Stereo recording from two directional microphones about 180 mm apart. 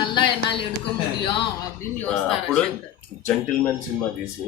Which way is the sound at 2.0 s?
5° left (ahead or behind).